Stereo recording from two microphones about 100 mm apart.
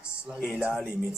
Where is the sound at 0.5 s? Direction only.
5° right (ahead or behind).